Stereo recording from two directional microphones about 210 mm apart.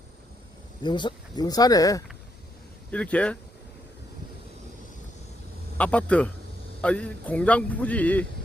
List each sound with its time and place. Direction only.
0.8 s speech: 20° left (ahead or behind)
2.9 s speech: 5° left (ahead or behind)
5.7 s speech: 5° left (ahead or behind)